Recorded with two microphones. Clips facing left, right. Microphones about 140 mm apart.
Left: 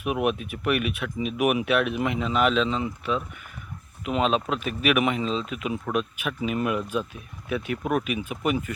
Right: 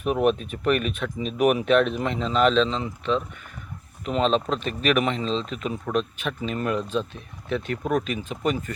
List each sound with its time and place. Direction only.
0.0 s speech: 10° left (ahead or behind)